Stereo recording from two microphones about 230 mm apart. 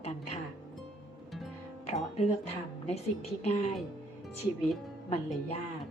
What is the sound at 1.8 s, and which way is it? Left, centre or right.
Speech, left.